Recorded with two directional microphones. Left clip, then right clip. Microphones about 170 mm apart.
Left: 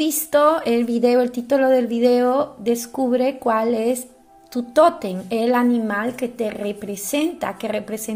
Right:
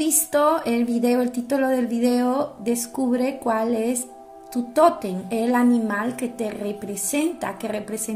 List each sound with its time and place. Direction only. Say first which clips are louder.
0.0 s a woman's voice: left 3 dB; 20° left (ahead or behind)